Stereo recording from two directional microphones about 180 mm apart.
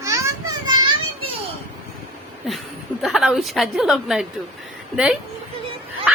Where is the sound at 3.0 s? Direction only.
Centre (ahead or behind).